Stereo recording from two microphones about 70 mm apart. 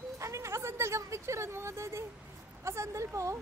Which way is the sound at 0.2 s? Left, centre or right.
Right.